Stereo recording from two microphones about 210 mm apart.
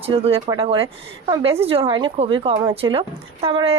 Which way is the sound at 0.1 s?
25° right (ahead or behind).